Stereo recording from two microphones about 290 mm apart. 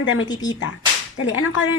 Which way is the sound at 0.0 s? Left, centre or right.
Left.